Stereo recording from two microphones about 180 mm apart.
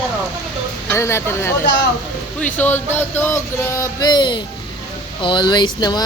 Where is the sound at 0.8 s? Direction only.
15° left (ahead or behind).